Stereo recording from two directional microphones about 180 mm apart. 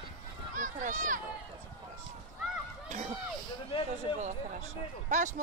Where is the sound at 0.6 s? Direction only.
45° right (ahead or behind).